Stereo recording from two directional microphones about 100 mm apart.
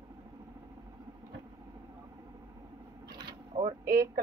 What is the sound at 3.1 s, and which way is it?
Mechanisms, 45° right (ahead or behind).